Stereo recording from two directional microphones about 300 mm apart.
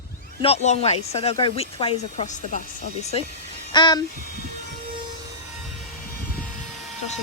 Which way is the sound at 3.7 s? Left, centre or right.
Centre.